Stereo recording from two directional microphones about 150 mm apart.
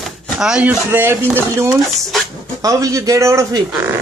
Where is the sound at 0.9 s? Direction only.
15° right (ahead or behind).